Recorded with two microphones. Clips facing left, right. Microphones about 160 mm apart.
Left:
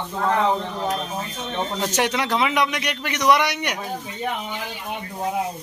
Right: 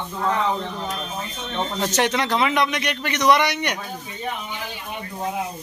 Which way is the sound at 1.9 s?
10° left (ahead or behind).